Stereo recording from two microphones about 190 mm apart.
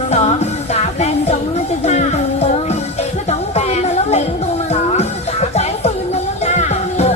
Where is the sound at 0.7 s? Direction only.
35° left (ahead or behind).